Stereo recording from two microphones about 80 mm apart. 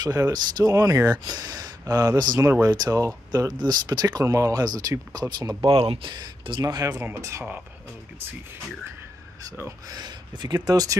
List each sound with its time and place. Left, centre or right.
0.0 s speech: right
3.3 s speech: right
5.6 s speech: right
6.6 s speech: right
6.9 s speech: right
7.2 s speech: right
9.8 s speech: right